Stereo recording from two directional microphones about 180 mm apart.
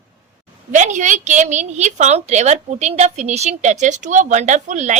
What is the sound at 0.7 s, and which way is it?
A woman's voice, 45° right (ahead or behind).